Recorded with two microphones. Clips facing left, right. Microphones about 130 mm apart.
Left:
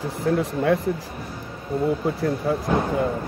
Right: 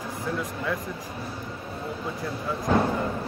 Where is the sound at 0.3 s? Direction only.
70° left (ahead or behind).